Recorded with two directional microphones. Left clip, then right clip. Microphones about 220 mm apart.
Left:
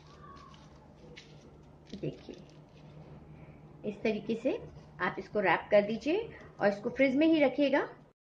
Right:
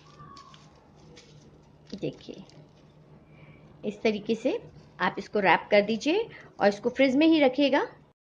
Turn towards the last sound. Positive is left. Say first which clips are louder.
# right 5 dB
turn(degrees=-30)  # may be behind; listen again after turning